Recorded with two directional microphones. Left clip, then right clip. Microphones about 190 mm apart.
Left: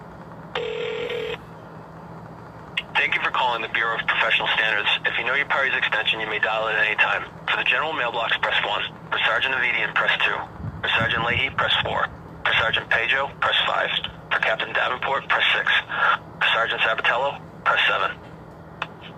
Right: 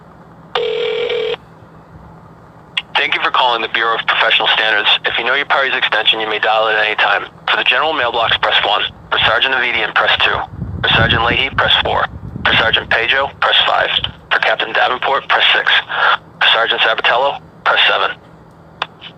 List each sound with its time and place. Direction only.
0.5 s telephone: 35° right (ahead or behind)
2.7 s speech: 35° right (ahead or behind)